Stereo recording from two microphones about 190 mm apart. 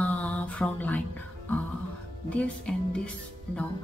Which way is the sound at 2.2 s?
5° left (ahead or behind).